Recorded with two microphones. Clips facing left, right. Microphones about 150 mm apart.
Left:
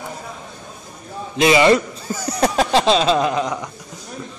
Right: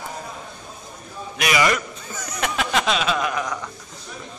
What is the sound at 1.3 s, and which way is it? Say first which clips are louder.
A man's voice: left 8 dB; 25° left (ahead or behind).